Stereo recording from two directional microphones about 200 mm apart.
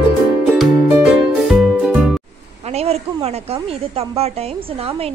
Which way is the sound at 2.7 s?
30° right (ahead or behind).